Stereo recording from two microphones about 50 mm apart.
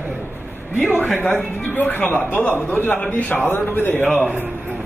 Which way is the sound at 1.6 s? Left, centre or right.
Left.